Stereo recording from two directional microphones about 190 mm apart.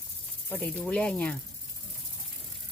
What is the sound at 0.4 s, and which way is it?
Speech, 10° left (ahead or behind).